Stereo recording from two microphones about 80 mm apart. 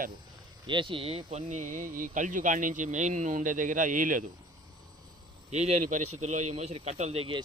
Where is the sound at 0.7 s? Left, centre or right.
Right.